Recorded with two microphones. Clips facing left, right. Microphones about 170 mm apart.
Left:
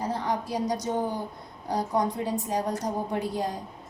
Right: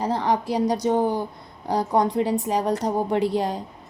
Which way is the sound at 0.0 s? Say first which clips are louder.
Right 6 dB; 80° right.